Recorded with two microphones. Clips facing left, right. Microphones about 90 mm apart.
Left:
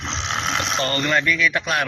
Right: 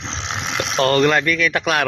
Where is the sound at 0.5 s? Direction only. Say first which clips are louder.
Right 5 dB; centre (ahead or behind).